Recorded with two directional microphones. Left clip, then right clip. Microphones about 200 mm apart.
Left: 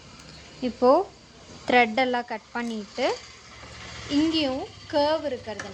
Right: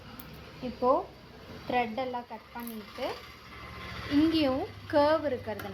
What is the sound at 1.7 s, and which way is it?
Speech, 40° left (ahead or behind).